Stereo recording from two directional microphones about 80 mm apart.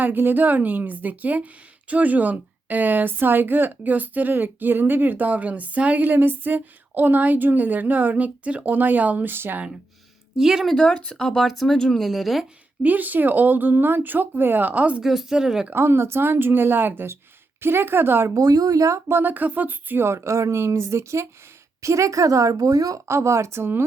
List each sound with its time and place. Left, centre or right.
0.0 s a woman's voice: right
10.3 s speech: centre
10.8 s speech: centre
12.8 s a woman's voice: right
15.0 s speech: centre
15.7 s a woman's voice: right
18.3 s speech: right